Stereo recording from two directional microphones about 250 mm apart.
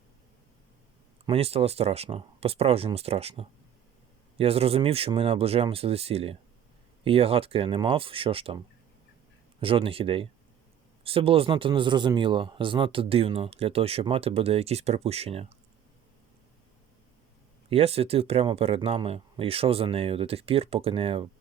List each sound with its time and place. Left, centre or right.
1.3 s speech: right
17.7 s speech: right